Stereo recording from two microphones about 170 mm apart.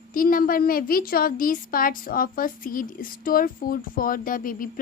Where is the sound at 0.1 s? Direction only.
55° left (ahead or behind).